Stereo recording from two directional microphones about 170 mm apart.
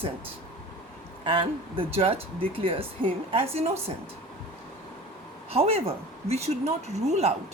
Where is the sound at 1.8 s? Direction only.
35° right (ahead or behind).